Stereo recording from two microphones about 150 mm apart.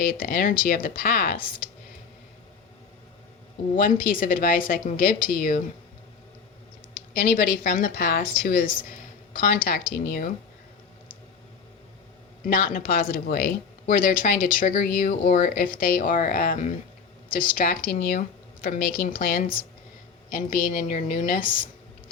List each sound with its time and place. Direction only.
0.0 s speech: 75° left (ahead or behind)
3.8 s speech: 70° left (ahead or behind)
6.9 s a woman's voice: 90° left; by 9.6 s 70° left (ahead or behind)
9.9 s speech: 90° left
12.5 s speech: 75° left (ahead or behind)